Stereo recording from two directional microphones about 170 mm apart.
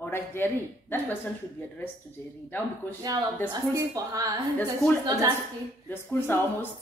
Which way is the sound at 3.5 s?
20° right (ahead or behind).